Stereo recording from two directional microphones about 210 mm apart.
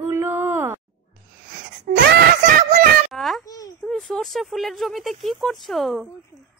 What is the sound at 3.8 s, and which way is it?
Speech, centre (ahead or behind).